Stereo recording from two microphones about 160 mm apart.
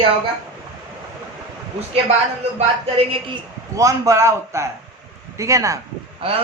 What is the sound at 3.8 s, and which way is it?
A man's voice, 20° right (ahead or behind).